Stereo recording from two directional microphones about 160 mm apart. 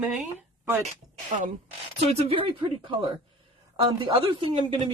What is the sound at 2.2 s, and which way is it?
A woman's voice, 35° right (ahead or behind).